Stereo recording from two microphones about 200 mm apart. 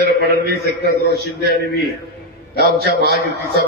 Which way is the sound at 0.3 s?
50° right (ahead or behind).